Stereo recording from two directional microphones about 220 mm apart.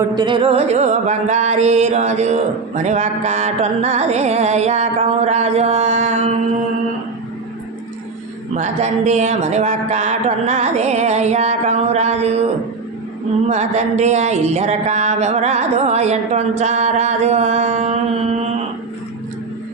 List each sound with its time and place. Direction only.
0.2 s music: 20° right (ahead or behind)
8.5 s music: 30° right (ahead or behind)
13.5 s music: 30° right (ahead or behind)